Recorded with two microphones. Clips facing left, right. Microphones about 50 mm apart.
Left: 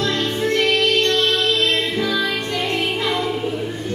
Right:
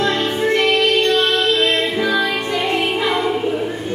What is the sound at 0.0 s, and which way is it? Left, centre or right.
Music, centre.